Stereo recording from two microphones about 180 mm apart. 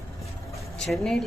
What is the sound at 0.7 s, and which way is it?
Speech, 5° left (ahead or behind).